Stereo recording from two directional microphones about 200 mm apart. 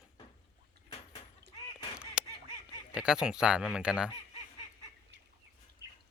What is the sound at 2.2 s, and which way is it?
Duck, 5° right (ahead or behind).